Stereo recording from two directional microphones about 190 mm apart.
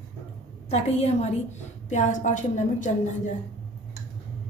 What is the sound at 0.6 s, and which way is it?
A woman's voice, 35° left (ahead or behind).